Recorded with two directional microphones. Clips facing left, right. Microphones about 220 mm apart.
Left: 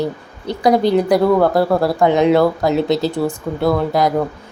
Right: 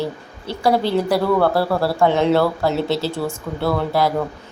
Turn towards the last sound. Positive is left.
turn(degrees=15)  # may be behind; listen again after turning